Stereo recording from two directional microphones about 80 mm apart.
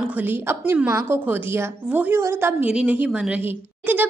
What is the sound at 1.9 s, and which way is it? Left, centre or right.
Speech, centre.